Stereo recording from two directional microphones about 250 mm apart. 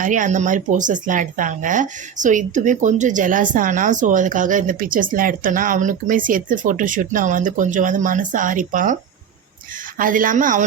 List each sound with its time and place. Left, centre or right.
0.0 s speech: right
10.0 s speech: right